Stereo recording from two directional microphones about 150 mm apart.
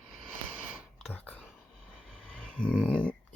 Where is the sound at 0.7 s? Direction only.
Centre (ahead or behind).